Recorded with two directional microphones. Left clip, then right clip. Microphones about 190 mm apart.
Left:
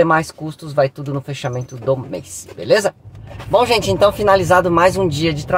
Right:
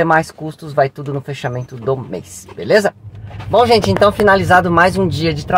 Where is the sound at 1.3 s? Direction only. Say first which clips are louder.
Right 1 dB; centre (ahead or behind).